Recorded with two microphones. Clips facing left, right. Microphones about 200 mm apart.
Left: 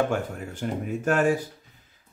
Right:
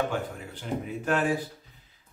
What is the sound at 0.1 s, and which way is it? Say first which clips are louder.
Speech: left 4 dB; 45° left (ahead or behind).